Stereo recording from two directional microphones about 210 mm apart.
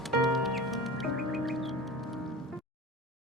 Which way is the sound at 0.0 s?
Centre (ahead or behind).